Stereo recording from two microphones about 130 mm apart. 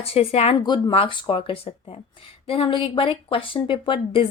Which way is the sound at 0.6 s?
40° left (ahead or behind).